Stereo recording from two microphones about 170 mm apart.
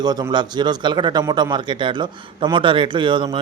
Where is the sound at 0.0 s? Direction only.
25° right (ahead or behind).